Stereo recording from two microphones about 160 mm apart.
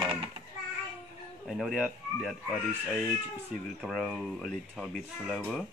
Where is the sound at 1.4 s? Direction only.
Centre (ahead or behind).